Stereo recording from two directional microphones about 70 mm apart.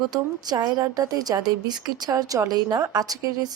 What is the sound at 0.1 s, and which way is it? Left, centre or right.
Speech, right.